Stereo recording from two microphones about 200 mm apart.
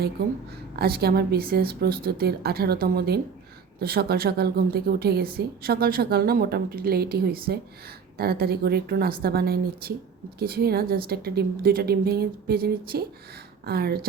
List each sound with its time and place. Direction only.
0.8 s a woman's voice: 50° right (ahead or behind)